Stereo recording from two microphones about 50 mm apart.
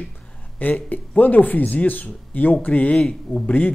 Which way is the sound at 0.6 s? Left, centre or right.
Left.